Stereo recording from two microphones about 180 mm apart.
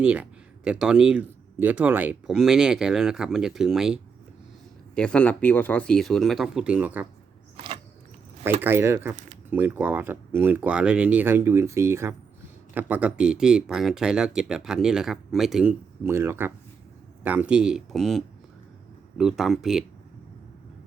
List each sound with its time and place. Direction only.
0.0 s speech: 5° right (ahead or behind)
7.5 s a sound: 30° right (ahead or behind)
8.6 s speech: 15° right (ahead or behind)
16.0 s speech: 15° right (ahead or behind)